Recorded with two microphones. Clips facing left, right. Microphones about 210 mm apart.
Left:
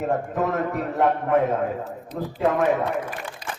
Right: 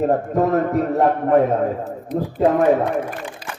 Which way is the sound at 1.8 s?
55° right (ahead or behind).